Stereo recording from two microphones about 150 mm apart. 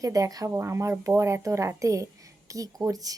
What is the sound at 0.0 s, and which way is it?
Speech, 25° right (ahead or behind).